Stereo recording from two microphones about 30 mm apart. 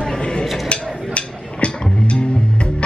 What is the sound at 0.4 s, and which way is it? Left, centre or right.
Music, left.